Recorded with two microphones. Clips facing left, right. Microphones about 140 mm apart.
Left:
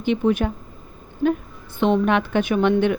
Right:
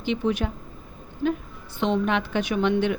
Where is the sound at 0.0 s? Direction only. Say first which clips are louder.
Left 5 dB; 50° left (ahead or behind).